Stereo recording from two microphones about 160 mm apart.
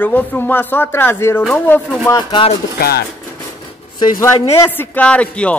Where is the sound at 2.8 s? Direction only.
70° left (ahead or behind).